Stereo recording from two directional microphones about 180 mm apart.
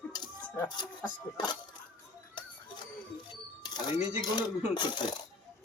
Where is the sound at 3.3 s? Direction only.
20° left (ahead or behind).